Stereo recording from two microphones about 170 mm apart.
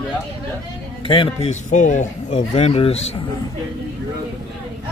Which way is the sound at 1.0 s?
30° left (ahead or behind).